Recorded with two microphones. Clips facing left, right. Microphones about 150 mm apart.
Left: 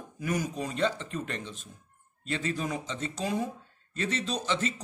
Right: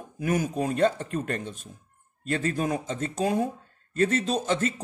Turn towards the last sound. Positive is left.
turn(degrees=-50)  # may be behind; listen again after turning